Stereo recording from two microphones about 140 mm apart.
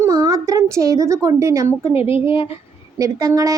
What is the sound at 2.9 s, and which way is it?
Speech, 25° right (ahead or behind).